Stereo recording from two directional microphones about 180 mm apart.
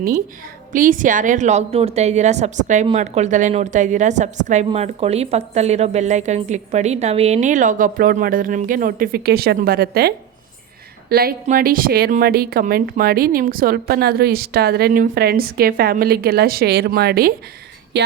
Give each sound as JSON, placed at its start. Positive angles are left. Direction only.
{"t": 0.7, "sound": "a woman's voice", "side_deg": -50}